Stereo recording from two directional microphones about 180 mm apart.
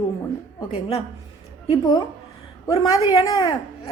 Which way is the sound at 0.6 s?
35° left (ahead or behind).